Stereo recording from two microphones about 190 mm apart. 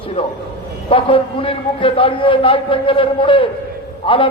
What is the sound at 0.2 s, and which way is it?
A man's voice, 30° left (ahead or behind).